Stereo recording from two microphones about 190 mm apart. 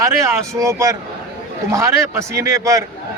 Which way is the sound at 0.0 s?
15° right (ahead or behind).